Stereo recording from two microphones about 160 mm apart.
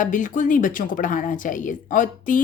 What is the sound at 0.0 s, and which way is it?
A woman's voice, 55° left (ahead or behind).